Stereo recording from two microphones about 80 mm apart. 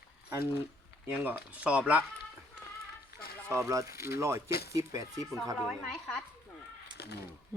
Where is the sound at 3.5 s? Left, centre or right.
Right.